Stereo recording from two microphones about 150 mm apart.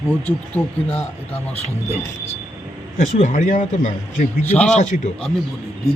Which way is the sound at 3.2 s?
55° left (ahead or behind).